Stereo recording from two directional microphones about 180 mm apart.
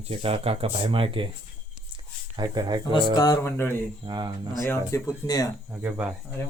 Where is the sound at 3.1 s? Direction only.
20° left (ahead or behind).